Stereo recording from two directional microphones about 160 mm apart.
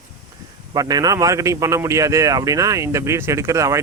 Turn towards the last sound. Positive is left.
turn(degrees=-20)  # may be behind; listen again after turning